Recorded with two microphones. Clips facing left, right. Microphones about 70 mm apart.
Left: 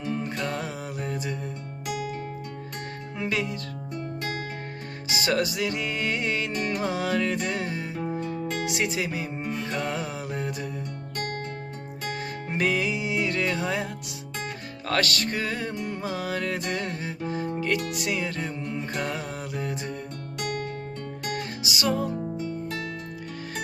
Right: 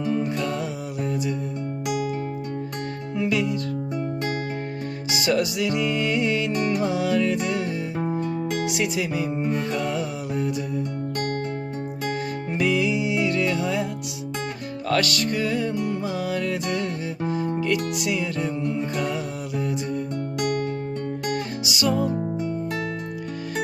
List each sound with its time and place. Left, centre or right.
0.1 s music: left
3.2 s music: left
5.1 s music: left
8.1 s music: right
8.7 s music: left
9.7 s mantra: left
12.5 s music: left
14.8 s music: left
17.9 s music: left
21.6 s music: left
22.1 s music: centre